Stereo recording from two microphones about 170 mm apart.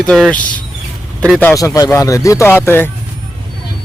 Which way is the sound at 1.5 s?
20° left (ahead or behind).